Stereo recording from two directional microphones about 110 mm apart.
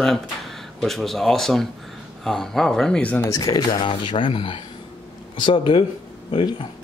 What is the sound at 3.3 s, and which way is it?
Speech, 35° left (ahead or behind).